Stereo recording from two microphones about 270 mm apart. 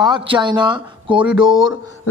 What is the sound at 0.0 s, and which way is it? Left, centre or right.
Speech, centre.